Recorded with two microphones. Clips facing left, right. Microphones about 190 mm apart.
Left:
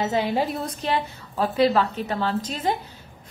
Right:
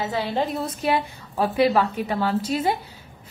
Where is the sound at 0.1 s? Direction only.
15° left (ahead or behind).